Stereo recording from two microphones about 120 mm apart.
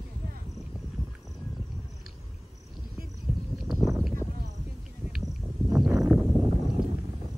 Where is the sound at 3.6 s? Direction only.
Centre (ahead or behind).